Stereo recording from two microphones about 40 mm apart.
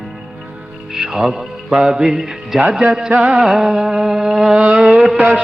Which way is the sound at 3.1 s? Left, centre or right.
Right.